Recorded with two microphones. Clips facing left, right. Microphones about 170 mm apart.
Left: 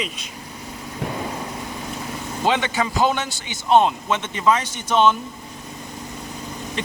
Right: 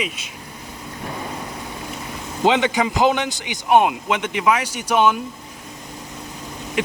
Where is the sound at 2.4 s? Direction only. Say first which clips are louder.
Right 4 dB; 15° right (ahead or behind).